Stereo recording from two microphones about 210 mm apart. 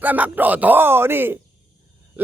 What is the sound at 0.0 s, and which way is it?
A man's voice, 10° right (ahead or behind).